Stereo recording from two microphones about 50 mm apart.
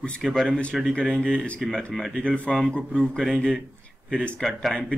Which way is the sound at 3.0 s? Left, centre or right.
Centre.